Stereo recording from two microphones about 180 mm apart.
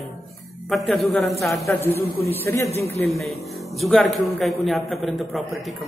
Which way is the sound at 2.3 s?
15° left (ahead or behind).